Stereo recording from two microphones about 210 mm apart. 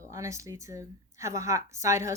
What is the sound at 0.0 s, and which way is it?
A woman's voice, 15° right (ahead or behind).